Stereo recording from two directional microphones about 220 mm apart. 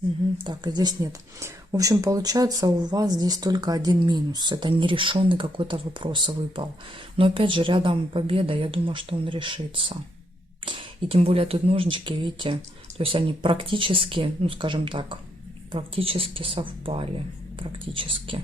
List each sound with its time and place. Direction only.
0.4 s speech: 20° right (ahead or behind)